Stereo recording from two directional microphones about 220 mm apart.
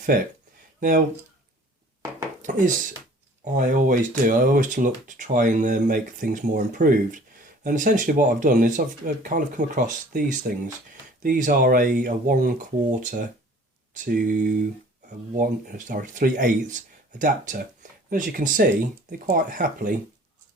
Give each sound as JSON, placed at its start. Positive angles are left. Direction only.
{"t": 0.1, "sound": "speech", "side_deg": -40}
{"t": 2.5, "sound": "speech", "side_deg": -35}